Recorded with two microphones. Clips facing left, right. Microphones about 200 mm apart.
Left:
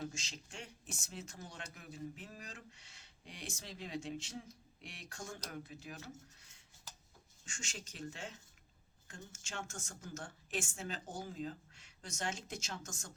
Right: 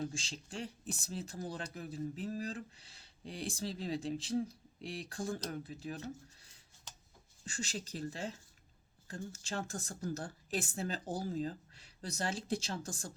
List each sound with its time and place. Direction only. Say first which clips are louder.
0.0 s speech: right 4 dB; 30° right (ahead or behind)